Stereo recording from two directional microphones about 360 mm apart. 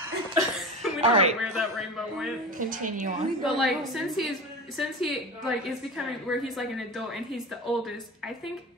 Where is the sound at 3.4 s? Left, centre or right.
Centre.